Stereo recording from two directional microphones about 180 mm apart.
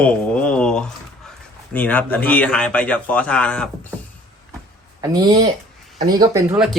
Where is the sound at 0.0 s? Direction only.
5° left (ahead or behind).